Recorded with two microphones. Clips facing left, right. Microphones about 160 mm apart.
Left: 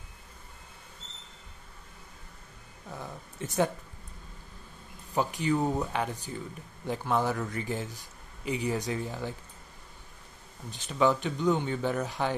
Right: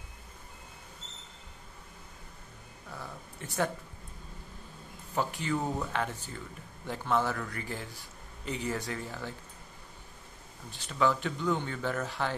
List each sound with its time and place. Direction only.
2.9 s a sound: 20° left (ahead or behind)
5.1 s speech: 15° left (ahead or behind)
10.7 s speech: 20° left (ahead or behind)